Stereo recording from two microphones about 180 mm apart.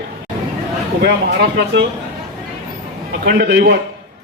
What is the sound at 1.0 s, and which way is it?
Speech, 70° right (ahead or behind).